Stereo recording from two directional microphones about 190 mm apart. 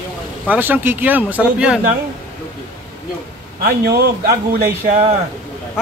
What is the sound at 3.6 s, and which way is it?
Speech, 55° right (ahead or behind).